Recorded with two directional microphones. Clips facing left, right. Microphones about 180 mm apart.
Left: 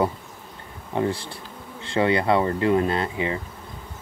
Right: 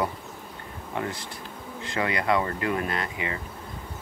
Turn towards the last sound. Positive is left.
turn(degrees=30)  # may be behind; listen again after turning